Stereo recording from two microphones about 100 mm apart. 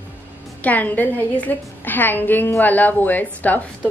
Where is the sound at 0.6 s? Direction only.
15° left (ahead or behind).